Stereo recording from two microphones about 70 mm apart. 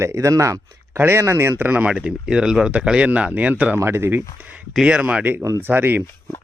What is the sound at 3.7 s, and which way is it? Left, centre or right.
Speech, right.